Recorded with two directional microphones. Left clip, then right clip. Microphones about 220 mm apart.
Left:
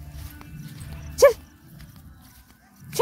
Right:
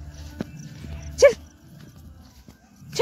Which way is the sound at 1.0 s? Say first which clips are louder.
Even; 20° left (ahead or behind).